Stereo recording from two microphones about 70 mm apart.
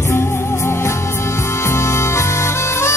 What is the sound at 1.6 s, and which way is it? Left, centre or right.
Music, left.